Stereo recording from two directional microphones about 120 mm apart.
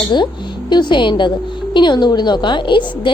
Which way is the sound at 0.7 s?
40° left (ahead or behind).